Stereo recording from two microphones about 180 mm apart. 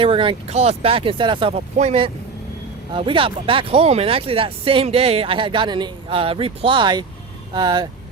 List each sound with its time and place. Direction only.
0.0 s speech: 30° right (ahead or behind)